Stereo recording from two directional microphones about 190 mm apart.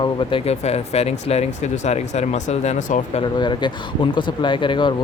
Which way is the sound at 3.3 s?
25° left (ahead or behind).